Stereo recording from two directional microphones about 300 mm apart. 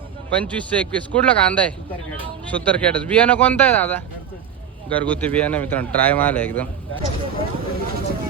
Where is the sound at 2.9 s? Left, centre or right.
Centre.